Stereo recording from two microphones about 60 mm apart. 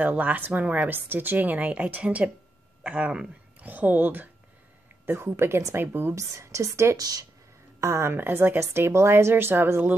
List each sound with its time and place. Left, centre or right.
0.0 s speech: right
5.0 s a woman's voice: right
6.1 s a woman's voice: right
7.0 s speech: right
7.8 s a woman's voice: right
8.3 s speech: right
8.5 s a woman's voice: right